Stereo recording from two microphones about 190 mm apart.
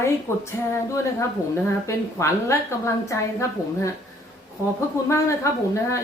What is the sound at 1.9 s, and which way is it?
A woman's voice, 15° left (ahead or behind).